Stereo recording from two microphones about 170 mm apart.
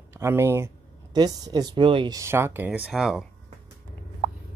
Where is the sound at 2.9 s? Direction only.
Centre (ahead or behind).